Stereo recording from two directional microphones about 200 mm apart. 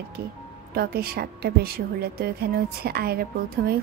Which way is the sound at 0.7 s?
50° right (ahead or behind).